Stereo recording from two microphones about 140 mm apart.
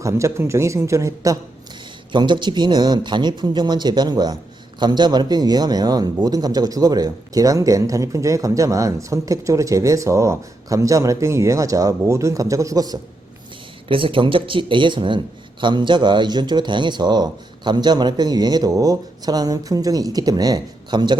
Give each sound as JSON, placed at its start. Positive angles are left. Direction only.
{"t": 0.0, "sound": "speech", "side_deg": -20}
{"t": 2.1, "sound": "speech", "side_deg": -35}
{"t": 13.8, "sound": "speech", "side_deg": -40}